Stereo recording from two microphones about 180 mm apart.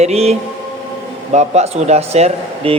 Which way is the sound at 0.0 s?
35° right (ahead or behind).